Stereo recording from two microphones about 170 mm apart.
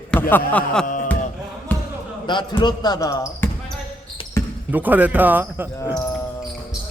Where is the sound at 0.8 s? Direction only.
50° left (ahead or behind).